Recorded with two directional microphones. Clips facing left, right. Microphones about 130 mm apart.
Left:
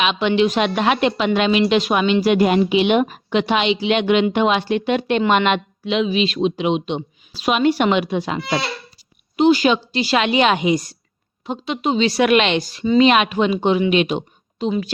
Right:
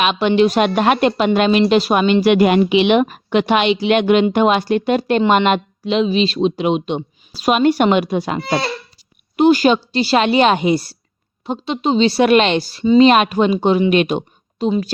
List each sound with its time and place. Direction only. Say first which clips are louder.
0.0 s speech: right 3 dB; 45° right (ahead or behind)
2.2 s a woman's voice: right 3 dB; 75° right (ahead or behind); by 14.7 s 50° right (ahead or behind)